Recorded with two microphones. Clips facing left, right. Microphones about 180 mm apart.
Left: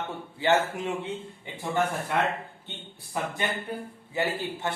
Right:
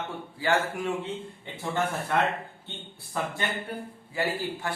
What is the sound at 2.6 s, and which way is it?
Speech, 15° left (ahead or behind).